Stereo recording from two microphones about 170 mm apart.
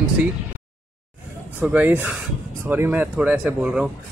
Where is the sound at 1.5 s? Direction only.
10° right (ahead or behind).